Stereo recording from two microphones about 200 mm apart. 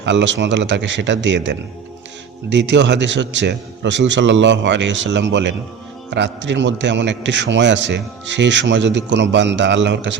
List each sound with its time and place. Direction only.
0.0 s a man's voice: 65° right (ahead or behind)